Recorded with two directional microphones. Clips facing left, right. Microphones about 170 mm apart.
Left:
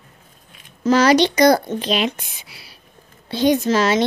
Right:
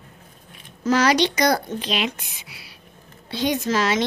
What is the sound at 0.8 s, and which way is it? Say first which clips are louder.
Speech: left 4 dB; 30° left (ahead or behind).